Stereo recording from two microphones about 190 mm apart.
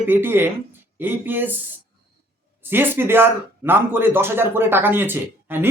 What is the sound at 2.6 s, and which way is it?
Speech, 10° right (ahead or behind).